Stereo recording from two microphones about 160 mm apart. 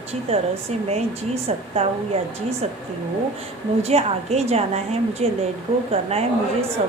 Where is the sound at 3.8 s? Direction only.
40° right (ahead or behind).